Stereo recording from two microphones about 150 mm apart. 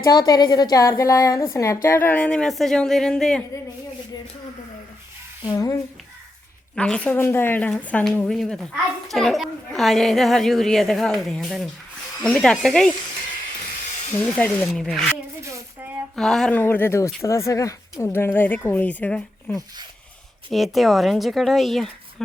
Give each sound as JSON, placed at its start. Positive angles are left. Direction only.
{"t": 0.0, "sound": "a woman's voice", "side_deg": 25}
{"t": 5.5, "sound": "a woman's voice", "side_deg": 25}
{"t": 6.7, "sound": "a woman's voice", "side_deg": 5}
{"t": 14.1, "sound": "speech", "side_deg": 10}
{"t": 15.4, "sound": "a sound", "side_deg": -20}
{"t": 16.1, "sound": "speech", "side_deg": 5}
{"t": 20.5, "sound": "a woman's voice", "side_deg": 0}